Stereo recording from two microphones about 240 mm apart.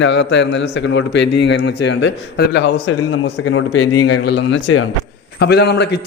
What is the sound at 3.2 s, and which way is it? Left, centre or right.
Speech, left.